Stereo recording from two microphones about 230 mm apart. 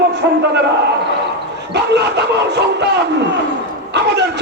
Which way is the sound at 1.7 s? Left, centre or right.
Right.